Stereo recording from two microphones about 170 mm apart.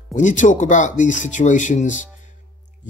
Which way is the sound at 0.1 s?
45° left (ahead or behind).